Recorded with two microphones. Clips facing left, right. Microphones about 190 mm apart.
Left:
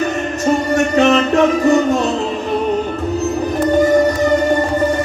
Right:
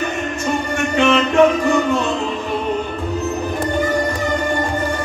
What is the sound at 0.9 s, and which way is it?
Music, 40° left (ahead or behind).